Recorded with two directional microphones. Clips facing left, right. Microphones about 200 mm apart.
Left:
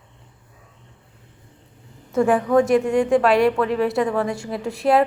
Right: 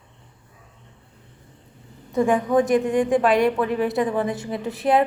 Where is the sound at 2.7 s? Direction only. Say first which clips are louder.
Left 2 dB; centre (ahead or behind).